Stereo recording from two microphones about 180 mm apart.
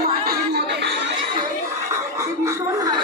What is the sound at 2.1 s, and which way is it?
Chuckle, 15° right (ahead or behind).